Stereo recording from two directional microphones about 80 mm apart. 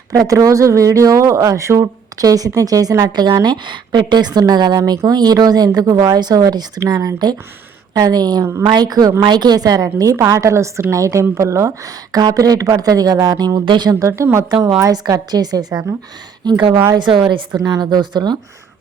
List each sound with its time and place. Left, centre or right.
0.1 s a woman's voice: right
3.1 s a woman's voice: right
9.2 s a woman's voice: right
13.7 s a woman's voice: right
14.0 s a woman's voice: right
14.8 s a woman's voice: right